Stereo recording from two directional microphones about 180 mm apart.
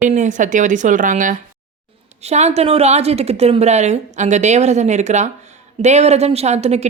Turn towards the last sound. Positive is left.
turn(degrees=-35)  # may be behind; listen again after turning